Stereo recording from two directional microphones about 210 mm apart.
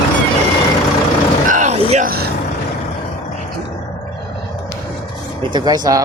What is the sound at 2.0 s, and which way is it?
Vehicle, 45° right (ahead or behind).